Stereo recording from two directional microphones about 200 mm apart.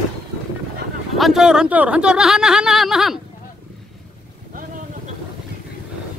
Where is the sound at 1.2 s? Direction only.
Centre (ahead or behind).